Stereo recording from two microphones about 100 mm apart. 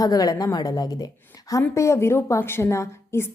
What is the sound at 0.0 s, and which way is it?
A woman's voice, 40° left (ahead or behind).